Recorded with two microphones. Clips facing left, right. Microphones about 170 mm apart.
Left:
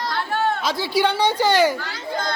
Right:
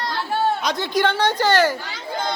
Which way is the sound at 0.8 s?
10° left (ahead or behind).